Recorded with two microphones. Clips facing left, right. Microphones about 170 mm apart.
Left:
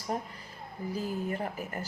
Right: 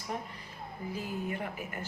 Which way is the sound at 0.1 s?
35° left (ahead or behind).